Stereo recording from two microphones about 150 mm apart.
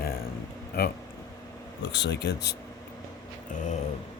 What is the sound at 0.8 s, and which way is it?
Speech, 90° left.